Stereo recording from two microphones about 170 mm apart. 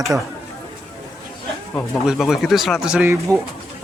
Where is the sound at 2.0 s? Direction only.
5° right (ahead or behind).